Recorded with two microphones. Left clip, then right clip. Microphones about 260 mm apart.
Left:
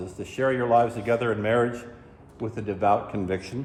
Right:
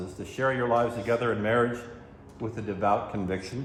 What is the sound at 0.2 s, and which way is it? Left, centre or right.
A man's voice, left.